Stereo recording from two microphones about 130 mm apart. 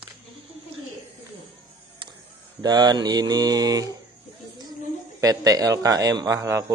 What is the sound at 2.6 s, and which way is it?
Speech, 30° right (ahead or behind).